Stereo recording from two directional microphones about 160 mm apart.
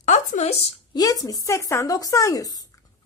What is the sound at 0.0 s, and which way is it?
Speech, 50° left (ahead or behind).